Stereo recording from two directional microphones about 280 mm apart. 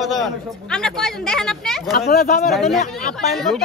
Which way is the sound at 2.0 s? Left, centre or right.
Left.